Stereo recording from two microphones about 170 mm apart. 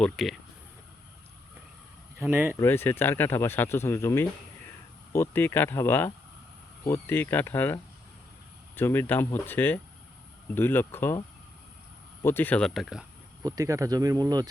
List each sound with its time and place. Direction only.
0.0 s speech: centre (ahead or behind)
2.1 s speech: 10° right (ahead or behind)
2.6 s speech: 15° left (ahead or behind)
12.2 s speech: 10° left (ahead or behind); by 13.1 s 5° right (ahead or behind)
13.4 s speech: 20° right (ahead or behind)